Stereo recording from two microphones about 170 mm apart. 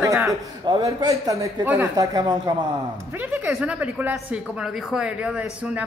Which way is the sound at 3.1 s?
10° right (ahead or behind).